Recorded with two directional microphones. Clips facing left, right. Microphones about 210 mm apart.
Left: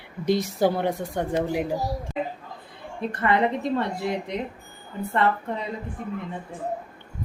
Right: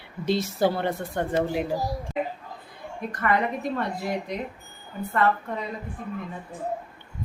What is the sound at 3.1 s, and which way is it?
A woman's voice, 25° left (ahead or behind).